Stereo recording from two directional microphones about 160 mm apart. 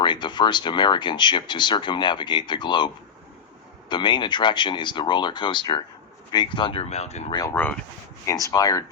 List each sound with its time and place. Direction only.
0.0 s speech: 30° left (ahead or behind)
7.3 s speech: 25° left (ahead or behind)
7.5 s speech: 10° left (ahead or behind)